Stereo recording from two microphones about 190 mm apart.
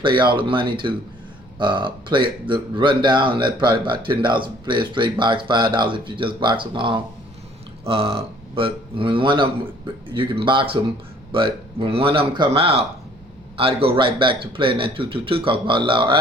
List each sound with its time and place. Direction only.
0.0 s speech: 25° right (ahead or behind)
11.8 s speech: 30° right (ahead or behind)